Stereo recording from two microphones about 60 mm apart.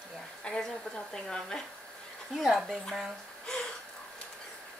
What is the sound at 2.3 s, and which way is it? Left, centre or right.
Speech, centre.